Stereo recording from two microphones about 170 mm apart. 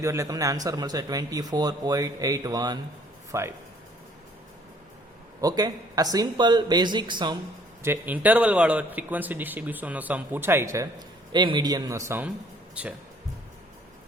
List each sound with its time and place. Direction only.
0.0 s speech: 15° right (ahead or behind)
5.4 s speech: 20° right (ahead or behind)
7.8 s speech: 10° right (ahead or behind)
11.3 s speech: 25° right (ahead or behind)